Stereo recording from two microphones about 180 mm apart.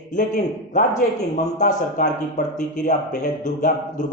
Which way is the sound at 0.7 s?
45° left (ahead or behind).